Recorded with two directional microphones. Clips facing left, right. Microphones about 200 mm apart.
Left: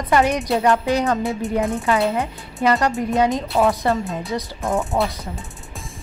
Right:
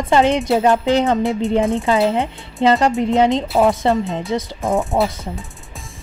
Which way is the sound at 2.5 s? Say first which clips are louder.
Right 4 dB; 20° right (ahead or behind).